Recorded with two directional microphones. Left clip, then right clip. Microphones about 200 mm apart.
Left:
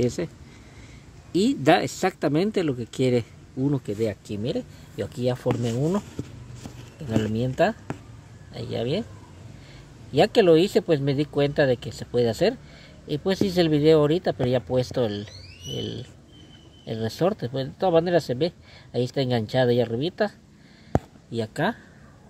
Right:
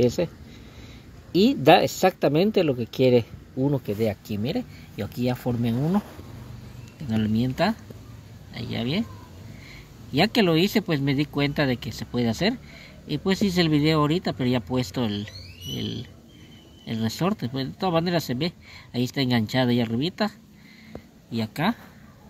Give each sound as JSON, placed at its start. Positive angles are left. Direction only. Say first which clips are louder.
{"t": 0.0, "sound": "speech", "louder": "right 4 dB", "side_deg": 5}
{"t": 1.3, "sound": "speech", "louder": "right 3 dB", "side_deg": 10}
{"t": 7.1, "sound": "speech", "louder": "left 1 dB", "side_deg": 20}
{"t": 10.1, "sound": "speech", "louder": "left 4 dB", "side_deg": 20}